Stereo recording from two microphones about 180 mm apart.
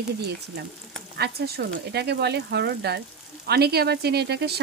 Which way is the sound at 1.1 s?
60° right (ahead or behind).